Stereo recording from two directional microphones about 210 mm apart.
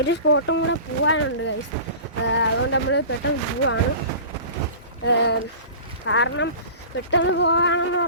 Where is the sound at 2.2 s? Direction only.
60° left (ahead or behind).